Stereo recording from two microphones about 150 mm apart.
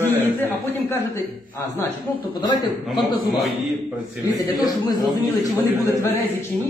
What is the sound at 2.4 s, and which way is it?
Speech, 30° left (ahead or behind).